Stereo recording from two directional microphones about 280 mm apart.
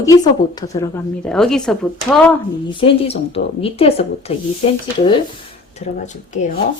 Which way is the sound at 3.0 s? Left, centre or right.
Left.